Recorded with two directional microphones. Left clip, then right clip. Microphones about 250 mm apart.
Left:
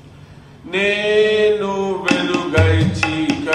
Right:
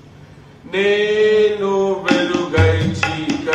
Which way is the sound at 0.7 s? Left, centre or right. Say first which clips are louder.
Even; left.